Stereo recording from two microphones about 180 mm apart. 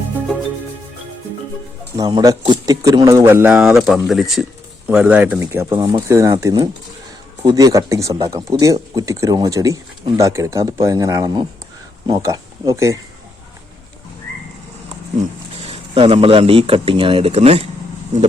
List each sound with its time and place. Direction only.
2.0 s speech: 20° right (ahead or behind)
15.6 s speech: 30° right (ahead or behind)